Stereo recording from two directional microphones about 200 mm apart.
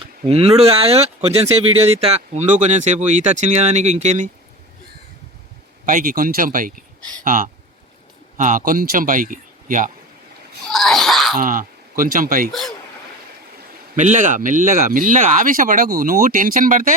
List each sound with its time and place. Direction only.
0.3 s speech: 30° right (ahead or behind)
5.8 s speech: 45° right (ahead or behind)
10.7 s wail: centre (ahead or behind)
11.3 s speech: 40° right (ahead or behind)
12.5 s speech: centre (ahead or behind)
13.9 s speech: 40° right (ahead or behind)